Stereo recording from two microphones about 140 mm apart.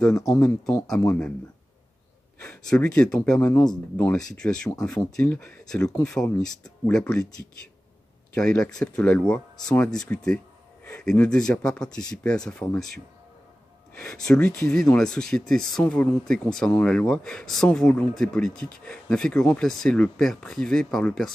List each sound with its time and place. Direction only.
0.4 s speech: 15° left (ahead or behind)
2.4 s speech: 5° left (ahead or behind)
8.4 s speech: 5° left (ahead or behind)